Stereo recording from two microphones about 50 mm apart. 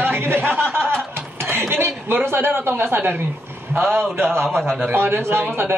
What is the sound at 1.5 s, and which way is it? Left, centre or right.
Speech, right.